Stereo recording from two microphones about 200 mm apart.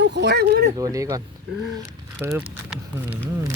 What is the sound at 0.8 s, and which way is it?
Speech, 15° right (ahead or behind).